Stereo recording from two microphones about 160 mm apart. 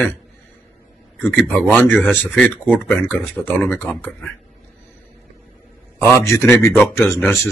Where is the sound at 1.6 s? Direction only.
10° left (ahead or behind).